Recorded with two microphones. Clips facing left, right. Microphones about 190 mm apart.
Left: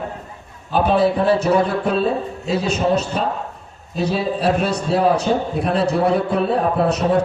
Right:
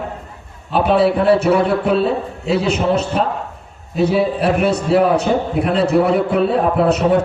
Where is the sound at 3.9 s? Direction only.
60° right (ahead or behind).